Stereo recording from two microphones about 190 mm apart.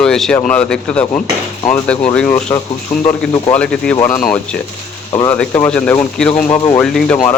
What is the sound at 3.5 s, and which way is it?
A man's voice, 5° left (ahead or behind).